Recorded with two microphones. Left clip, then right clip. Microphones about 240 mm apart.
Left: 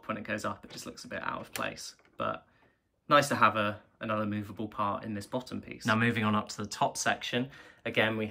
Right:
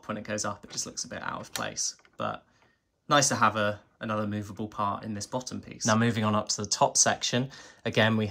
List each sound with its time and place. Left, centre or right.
0.0 s speech: centre